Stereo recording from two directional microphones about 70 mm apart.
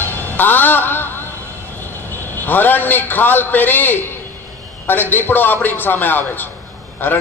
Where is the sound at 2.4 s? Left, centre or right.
Left.